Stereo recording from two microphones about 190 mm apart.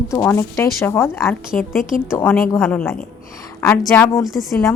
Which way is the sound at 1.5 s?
45° left (ahead or behind).